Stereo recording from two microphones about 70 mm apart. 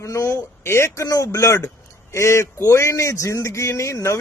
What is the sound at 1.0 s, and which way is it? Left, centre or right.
Speech, left.